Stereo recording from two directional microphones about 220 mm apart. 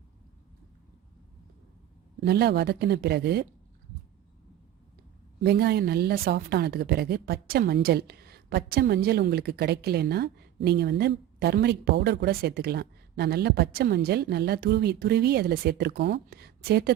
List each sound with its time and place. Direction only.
2.2 s a woman's voice: 45° right (ahead or behind)
5.4 s a woman's voice: 45° right (ahead or behind)